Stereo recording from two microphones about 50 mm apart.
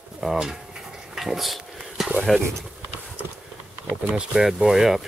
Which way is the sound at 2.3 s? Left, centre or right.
Centre.